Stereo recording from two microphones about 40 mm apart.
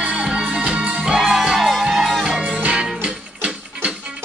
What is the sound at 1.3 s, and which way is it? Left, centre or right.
Music, centre.